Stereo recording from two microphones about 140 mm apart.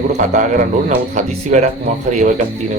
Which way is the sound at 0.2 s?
70° right (ahead or behind).